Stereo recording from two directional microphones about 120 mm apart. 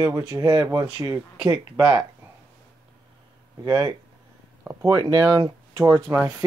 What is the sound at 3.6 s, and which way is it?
Speech, 35° right (ahead or behind).